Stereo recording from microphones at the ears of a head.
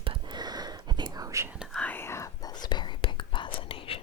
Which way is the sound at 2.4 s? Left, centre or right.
Left.